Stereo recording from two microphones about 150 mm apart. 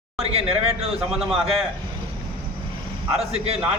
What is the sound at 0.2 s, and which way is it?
A man's voice, 45° right (ahead or behind).